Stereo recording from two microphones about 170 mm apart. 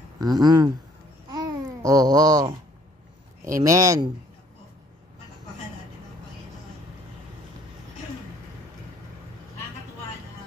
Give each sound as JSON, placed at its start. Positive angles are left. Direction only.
{"t": 0.2, "sound": "speech", "side_deg": -25}
{"t": 1.3, "sound": "babbling", "side_deg": -20}
{"t": 3.5, "sound": "speech", "side_deg": -20}